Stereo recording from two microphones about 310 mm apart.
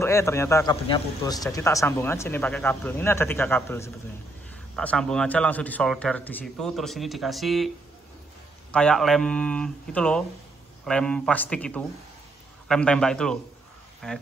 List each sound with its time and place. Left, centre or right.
0.0 s a man's voice: centre
8.7 s a man's voice: centre